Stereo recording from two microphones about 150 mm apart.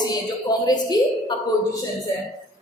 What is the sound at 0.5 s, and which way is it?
Speech, 25° left (ahead or behind).